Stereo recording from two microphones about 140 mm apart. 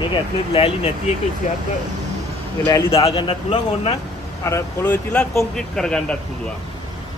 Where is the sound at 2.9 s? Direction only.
45° left (ahead or behind).